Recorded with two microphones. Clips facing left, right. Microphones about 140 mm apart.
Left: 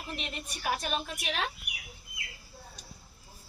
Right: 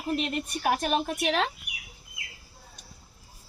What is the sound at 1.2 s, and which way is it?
Speech, 85° right.